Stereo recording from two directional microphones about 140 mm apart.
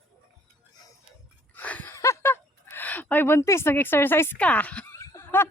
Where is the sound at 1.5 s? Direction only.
10° left (ahead or behind).